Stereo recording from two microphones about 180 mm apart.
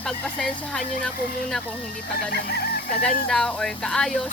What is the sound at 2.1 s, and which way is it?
Speech, 60° left (ahead or behind).